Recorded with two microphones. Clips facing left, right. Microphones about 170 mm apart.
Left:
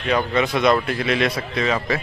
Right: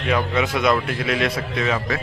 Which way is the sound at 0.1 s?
5° right (ahead or behind).